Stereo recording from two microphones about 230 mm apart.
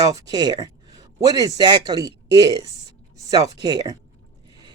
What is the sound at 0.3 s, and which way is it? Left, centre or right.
A woman's voice, centre.